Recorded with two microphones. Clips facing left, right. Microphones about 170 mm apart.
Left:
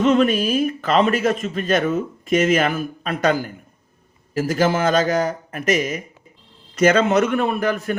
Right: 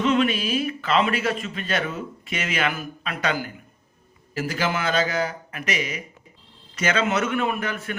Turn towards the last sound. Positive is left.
turn(degrees=40)  # may be behind; listen again after turning